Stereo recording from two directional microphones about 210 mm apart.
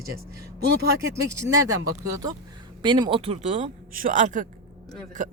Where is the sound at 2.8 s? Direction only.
20° right (ahead or behind).